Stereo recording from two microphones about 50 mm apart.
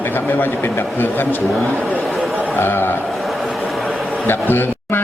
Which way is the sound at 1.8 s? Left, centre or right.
Right.